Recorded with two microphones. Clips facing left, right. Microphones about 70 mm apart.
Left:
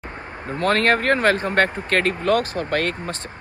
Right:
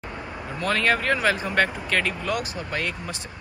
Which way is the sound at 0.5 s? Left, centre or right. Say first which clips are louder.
Left 5 dB; left.